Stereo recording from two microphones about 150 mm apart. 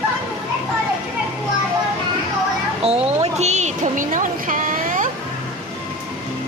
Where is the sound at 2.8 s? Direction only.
45° right (ahead or behind); by 5.1 s 60° right (ahead or behind).